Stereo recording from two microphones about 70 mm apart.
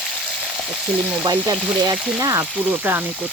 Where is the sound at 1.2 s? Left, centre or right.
Right.